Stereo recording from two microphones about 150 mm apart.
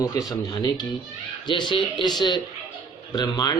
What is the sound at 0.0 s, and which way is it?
Speech, 25° left (ahead or behind).